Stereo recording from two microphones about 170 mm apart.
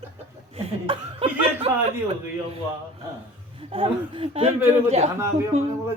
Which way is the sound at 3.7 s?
30° right (ahead or behind).